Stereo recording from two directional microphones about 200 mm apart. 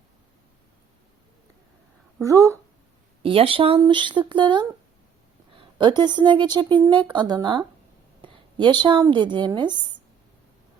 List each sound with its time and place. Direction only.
2.2 s speech: 15° right (ahead or behind)
3.2 s speech: 25° right (ahead or behind)